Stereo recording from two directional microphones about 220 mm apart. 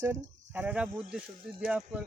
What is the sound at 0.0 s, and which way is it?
Speech, 10° right (ahead or behind).